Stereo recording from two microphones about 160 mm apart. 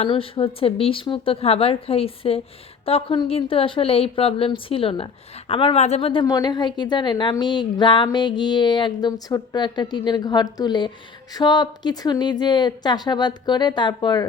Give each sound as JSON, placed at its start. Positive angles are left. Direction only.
{"t": 0.1, "sound": "a woman's voice", "side_deg": 35}